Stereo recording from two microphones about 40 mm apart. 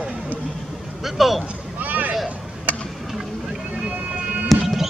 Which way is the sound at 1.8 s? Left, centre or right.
Right.